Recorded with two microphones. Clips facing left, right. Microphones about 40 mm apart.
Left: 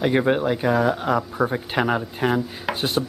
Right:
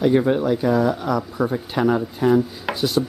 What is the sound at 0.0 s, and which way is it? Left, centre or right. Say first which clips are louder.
Speech: right 2 dB; left.